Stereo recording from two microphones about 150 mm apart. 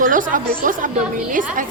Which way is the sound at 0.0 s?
60° right (ahead or behind).